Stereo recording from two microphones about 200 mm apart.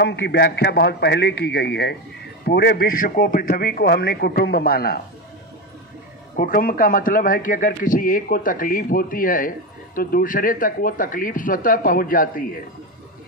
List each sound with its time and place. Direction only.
0.0 s a man's voice: 60° left (ahead or behind)
6.3 s a man's voice: 45° left (ahead or behind)